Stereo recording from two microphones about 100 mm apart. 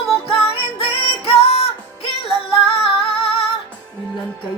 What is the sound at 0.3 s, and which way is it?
Music, 65° left (ahead or behind).